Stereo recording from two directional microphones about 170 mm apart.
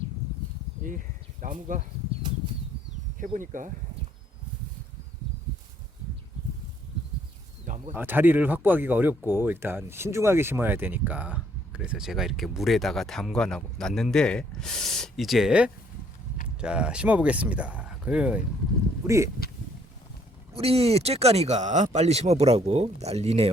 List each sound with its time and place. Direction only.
0.9 s speech: 50° right (ahead or behind)
3.2 s speech: 50° right (ahead or behind)
7.9 s speech: 10° right (ahead or behind)
19.0 s speech: 15° right (ahead or behind)
20.5 s speech: 35° right (ahead or behind)